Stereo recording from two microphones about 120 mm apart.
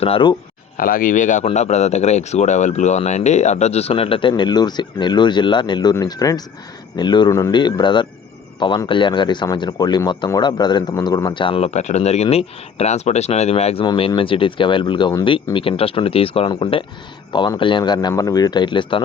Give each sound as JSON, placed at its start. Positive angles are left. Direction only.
{"t": 0.0, "sound": "speech", "side_deg": 45}
{"t": 1.1, "sound": "speech", "side_deg": 90}
{"t": 1.5, "sound": "speech", "side_deg": 65}
{"t": 7.5, "sound": "a man's voice", "side_deg": 40}
{"t": 11.7, "sound": "speech", "side_deg": 70}
{"t": 13.8, "sound": "speech", "side_deg": 45}